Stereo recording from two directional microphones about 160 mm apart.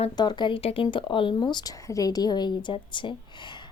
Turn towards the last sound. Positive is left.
turn(degrees=30)  # may be behind; listen again after turning